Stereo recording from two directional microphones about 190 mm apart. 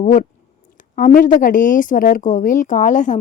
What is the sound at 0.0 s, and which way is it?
Speech, 40° left (ahead or behind).